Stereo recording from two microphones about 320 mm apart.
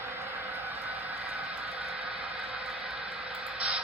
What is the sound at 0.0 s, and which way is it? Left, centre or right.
Vehicle, centre.